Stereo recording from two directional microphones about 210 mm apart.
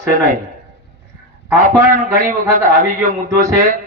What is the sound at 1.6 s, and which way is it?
Speech, 40° right (ahead or behind).